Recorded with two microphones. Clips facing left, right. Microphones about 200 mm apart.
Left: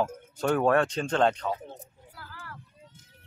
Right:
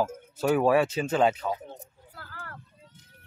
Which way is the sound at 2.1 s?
55° right (ahead or behind).